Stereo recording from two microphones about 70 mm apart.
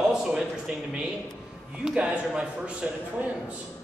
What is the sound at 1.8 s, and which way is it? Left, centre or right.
A man's voice, centre.